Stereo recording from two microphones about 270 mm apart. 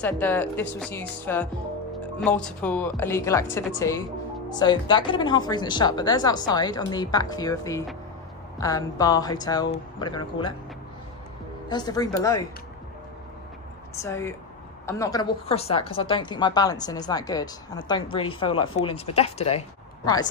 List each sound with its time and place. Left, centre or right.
0.0 s a woman's voice: centre
11.7 s a woman's voice: centre
14.0 s a woman's voice: centre